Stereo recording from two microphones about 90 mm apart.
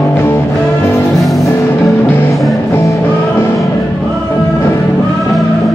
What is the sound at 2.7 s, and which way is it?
Music, 30° left (ahead or behind).